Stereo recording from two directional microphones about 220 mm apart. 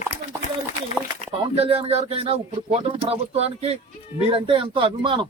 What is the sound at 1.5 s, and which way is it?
A man's voice, 25° right (ahead or behind).